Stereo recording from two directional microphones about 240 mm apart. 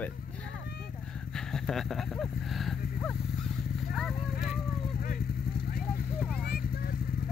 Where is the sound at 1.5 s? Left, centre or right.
Centre.